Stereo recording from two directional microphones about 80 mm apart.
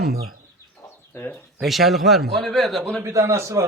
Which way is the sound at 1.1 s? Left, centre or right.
Left.